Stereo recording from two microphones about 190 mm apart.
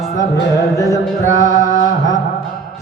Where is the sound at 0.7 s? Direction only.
15° left (ahead or behind).